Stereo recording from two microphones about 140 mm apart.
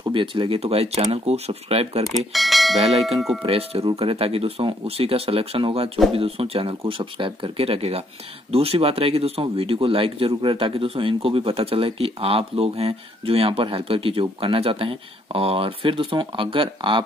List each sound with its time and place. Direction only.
0.1 s speech: 35° right (ahead or behind)
2.3 s speech: centre (ahead or behind)
3.4 s speech: 45° right (ahead or behind)